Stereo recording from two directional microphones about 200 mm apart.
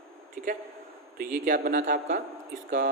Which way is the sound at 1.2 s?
45° right (ahead or behind).